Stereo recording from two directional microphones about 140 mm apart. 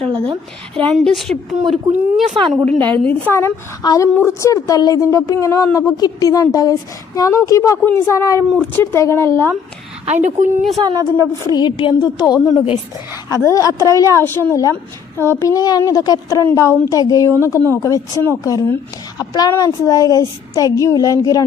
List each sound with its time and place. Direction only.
0.9 s a woman's voice: centre (ahead or behind)
2.6 s a woman's voice: 10° left (ahead or behind)
10.2 s a woman's voice: 65° right (ahead or behind)
10.8 s a woman's voice: 25° right (ahead or behind)
11.5 s a woman's voice: 35° left (ahead or behind)